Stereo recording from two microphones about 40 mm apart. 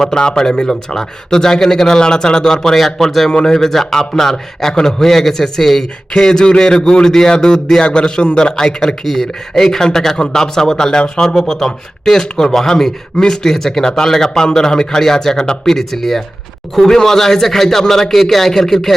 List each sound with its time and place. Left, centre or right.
0.0 s a man's voice: centre
11.3 s a man's voice: centre